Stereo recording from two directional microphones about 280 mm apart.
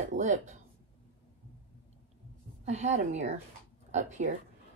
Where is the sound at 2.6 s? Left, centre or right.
Right.